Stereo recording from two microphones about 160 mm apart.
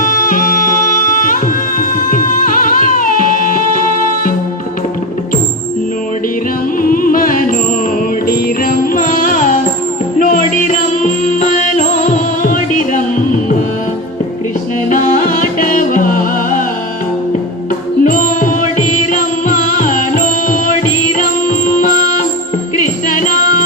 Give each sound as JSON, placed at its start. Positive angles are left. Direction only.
{"t": 0.0, "sound": "music", "side_deg": 60}
{"t": 6.9, "sound": "music", "side_deg": 60}
{"t": 14.8, "sound": "music", "side_deg": 55}
{"t": 18.0, "sound": "music", "side_deg": 55}